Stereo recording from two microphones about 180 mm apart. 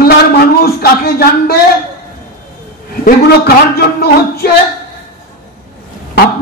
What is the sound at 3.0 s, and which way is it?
A man's voice, 60° left (ahead or behind).